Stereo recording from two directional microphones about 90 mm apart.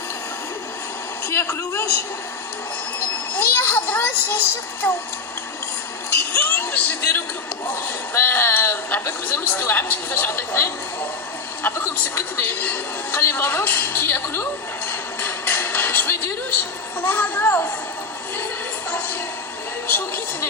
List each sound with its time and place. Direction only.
1.3 s a man's voice: 30° left (ahead or behind)
3.3 s a woman's voice: 25° left (ahead or behind)
6.1 s a woman's voice: 25° left (ahead or behind)
14.8 s a sound: 25° left (ahead or behind)
17.0 s a woman's voice: 20° left (ahead or behind)
18.9 s a sound: 20° left (ahead or behind)
19.9 s a woman's voice: 20° left (ahead or behind)